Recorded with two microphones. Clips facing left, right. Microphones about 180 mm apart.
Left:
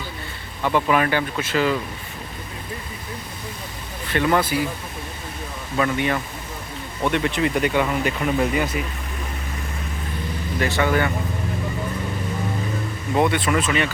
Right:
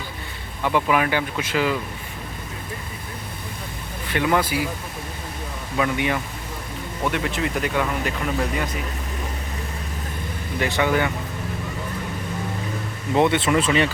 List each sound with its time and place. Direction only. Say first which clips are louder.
0.6 s speech: left 1 dB; 10° right (ahead or behind)
4.1 s speech: left 1 dB; 10° right (ahead or behind)
5.7 s speech: left 1 dB; 10° right (ahead or behind)
10.6 s speech: even; 15° right (ahead or behind)
13.1 s speech: right 1 dB; 25° right (ahead or behind)